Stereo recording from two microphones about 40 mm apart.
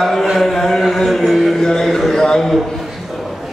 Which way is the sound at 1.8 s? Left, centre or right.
Centre.